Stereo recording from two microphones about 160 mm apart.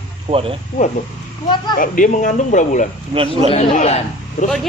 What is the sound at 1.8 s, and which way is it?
Speech, 55° left (ahead or behind).